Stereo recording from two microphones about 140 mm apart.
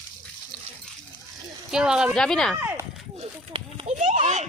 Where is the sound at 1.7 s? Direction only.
5° right (ahead or behind).